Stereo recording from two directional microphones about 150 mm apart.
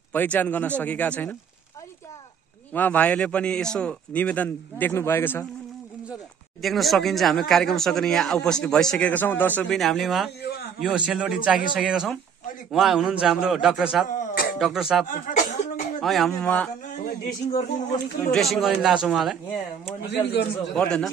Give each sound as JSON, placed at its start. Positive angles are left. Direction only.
{"t": 0.1, "sound": "a man's voice", "side_deg": 10}
{"t": 2.7, "sound": "a man's voice", "side_deg": 10}
{"t": 6.6, "sound": "speech", "side_deg": 0}
{"t": 9.8, "sound": "speech", "side_deg": 0}
{"t": 14.0, "sound": "a sound", "side_deg": 60}
{"t": 14.6, "sound": "speech", "side_deg": -5}
{"t": 15.0, "sound": "chuckle", "side_deg": 55}
{"t": 16.0, "sound": "speech", "side_deg": 0}
{"t": 17.6, "sound": "speech", "side_deg": 65}
{"t": 18.3, "sound": "speech", "side_deg": 0}
{"t": 20.1, "sound": "speech", "side_deg": 90}
{"t": 20.7, "sound": "speech", "side_deg": 5}